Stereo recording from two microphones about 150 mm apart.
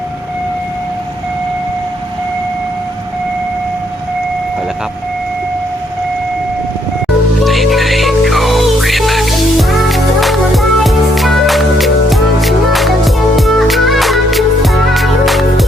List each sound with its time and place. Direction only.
7.4 s music: centre (ahead or behind)